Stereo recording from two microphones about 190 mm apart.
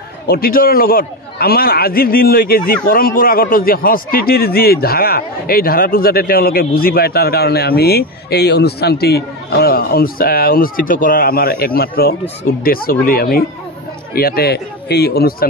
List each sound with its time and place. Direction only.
0.3 s a man's voice: 50° left (ahead or behind)